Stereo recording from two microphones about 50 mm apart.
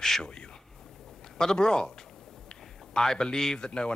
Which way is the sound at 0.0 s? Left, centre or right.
Centre.